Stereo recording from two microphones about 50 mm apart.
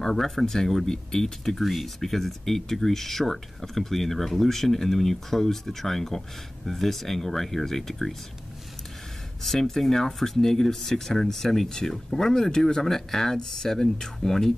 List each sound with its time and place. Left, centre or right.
0.0 s speech: centre
9.4 s speech: centre